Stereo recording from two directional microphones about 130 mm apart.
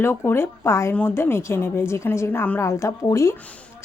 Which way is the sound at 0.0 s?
20° left (ahead or behind).